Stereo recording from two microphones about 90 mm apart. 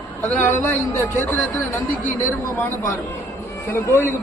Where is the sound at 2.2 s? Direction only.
20° left (ahead or behind).